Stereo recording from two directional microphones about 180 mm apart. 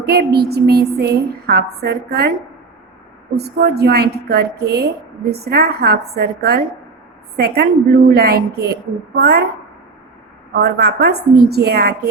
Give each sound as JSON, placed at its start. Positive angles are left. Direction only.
{"t": 0.0, "sound": "a woman's voice", "side_deg": -60}
{"t": 3.3, "sound": "a woman's voice", "side_deg": -65}
{"t": 10.5, "sound": "a woman's voice", "side_deg": -65}